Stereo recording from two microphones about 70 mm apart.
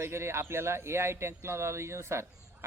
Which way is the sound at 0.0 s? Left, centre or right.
Right.